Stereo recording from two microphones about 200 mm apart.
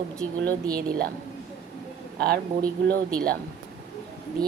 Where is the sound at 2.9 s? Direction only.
5° left (ahead or behind).